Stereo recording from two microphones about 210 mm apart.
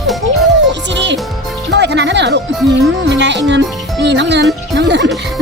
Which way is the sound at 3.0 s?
55° right (ahead or behind).